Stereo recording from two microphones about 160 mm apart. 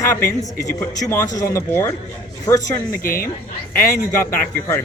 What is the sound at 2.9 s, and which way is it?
Speech, 65° left (ahead or behind).